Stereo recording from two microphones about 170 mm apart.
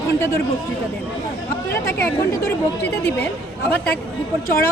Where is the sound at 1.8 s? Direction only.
15° left (ahead or behind).